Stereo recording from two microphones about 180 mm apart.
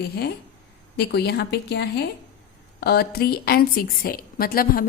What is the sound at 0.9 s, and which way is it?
A woman's voice, 65° left (ahead or behind).